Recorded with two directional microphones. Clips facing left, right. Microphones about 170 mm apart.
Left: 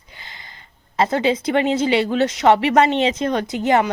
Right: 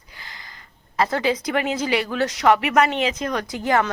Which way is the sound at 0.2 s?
20° left (ahead or behind).